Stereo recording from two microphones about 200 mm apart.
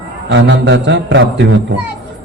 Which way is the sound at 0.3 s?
65° right (ahead or behind).